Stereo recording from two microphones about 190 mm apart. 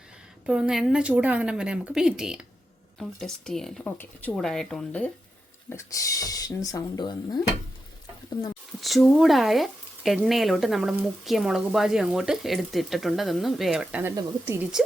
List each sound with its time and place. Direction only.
0.4 s speech: 5° right (ahead or behind); by 7.4 s 20° left (ahead or behind)
8.8 s speech: centre (ahead or behind)